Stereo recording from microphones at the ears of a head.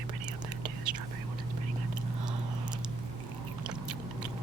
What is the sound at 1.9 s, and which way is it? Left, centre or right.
Biting, right.